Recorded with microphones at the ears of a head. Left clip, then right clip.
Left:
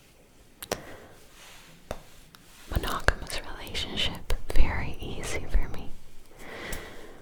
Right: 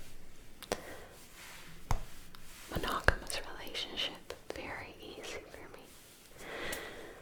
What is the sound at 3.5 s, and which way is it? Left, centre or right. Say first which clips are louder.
Whispering: left 6 dB; left.